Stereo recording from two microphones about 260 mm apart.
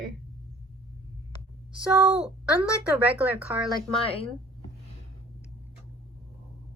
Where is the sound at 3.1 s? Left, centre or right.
Centre.